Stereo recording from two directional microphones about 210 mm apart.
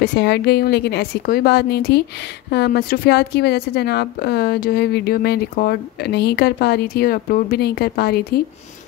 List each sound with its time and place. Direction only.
0.0 s a woman's voice: 50° left (ahead or behind)